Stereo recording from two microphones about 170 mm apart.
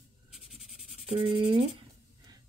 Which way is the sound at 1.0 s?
35° right (ahead or behind).